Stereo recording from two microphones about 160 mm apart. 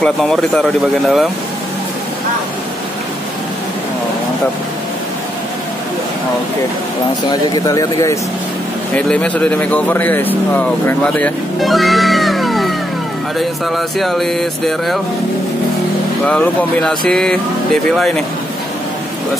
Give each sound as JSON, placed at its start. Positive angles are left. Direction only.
{"t": 0.0, "sound": "speech", "side_deg": 5}
{"t": 7.2, "sound": "speech", "side_deg": 25}
{"t": 8.9, "sound": "speech", "side_deg": 5}
{"t": 11.6, "sound": "music", "side_deg": 0}
{"t": 13.4, "sound": "speech", "side_deg": 0}
{"t": 16.3, "sound": "speech", "side_deg": 5}